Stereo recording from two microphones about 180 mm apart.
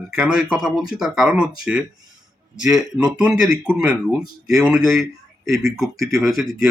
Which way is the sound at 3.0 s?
5° right (ahead or behind).